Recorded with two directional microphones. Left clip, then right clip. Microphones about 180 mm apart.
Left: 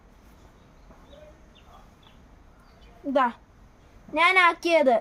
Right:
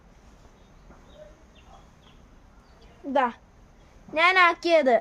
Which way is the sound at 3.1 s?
25° right (ahead or behind).